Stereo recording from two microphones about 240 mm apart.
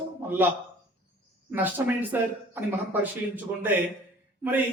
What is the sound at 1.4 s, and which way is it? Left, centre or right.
A man's voice, centre.